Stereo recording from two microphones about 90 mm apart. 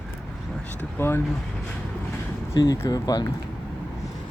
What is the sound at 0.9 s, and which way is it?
Speech, 25° left (ahead or behind).